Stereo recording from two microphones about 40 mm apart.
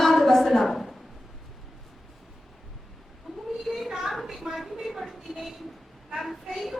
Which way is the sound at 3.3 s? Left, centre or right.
Centre.